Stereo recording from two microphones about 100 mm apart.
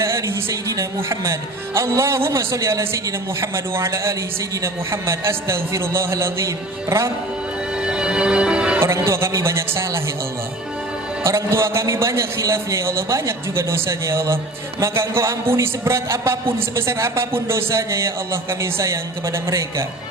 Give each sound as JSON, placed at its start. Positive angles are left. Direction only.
{"t": 0.0, "sound": "a man's voice", "side_deg": -30}
{"t": 7.8, "sound": "music", "side_deg": -10}
{"t": 8.8, "sound": "speech", "side_deg": -25}
{"t": 11.2, "sound": "a man's voice", "side_deg": -30}